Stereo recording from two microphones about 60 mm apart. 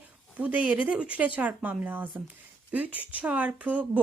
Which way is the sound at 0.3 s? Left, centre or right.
Right.